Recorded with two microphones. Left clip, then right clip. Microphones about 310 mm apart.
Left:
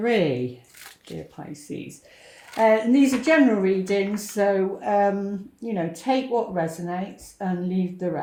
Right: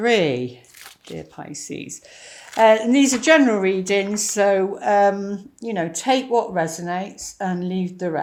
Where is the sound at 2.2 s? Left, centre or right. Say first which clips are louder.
Right 5 dB; right.